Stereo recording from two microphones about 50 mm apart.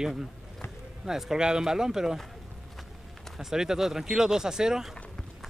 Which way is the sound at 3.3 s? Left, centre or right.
Centre.